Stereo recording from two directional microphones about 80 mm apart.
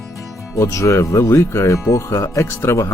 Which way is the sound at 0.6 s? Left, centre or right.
Left.